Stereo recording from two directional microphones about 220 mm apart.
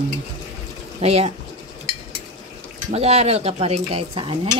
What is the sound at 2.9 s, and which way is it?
Speech, 30° right (ahead or behind).